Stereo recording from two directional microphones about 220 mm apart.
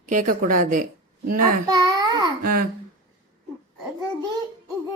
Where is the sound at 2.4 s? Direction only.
40° right (ahead or behind).